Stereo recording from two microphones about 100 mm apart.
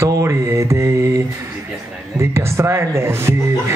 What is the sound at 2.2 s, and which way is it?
A man's voice, 25° right (ahead or behind).